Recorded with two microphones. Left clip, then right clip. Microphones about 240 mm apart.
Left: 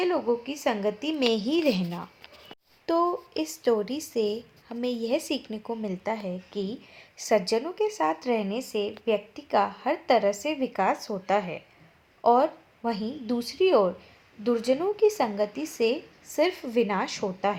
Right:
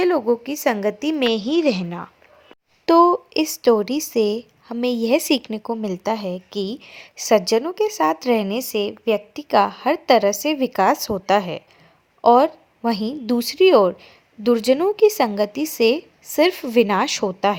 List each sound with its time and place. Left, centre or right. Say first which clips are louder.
0.0 s speech: right 7 dB; right
1.2 s a woman's voice: right 5 dB; centre
2.8 s speech: right 11 dB; right